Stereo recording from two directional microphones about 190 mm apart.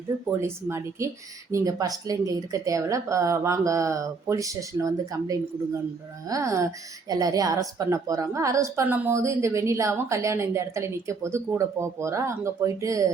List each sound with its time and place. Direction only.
0.3 s speech: 15° right (ahead or behind)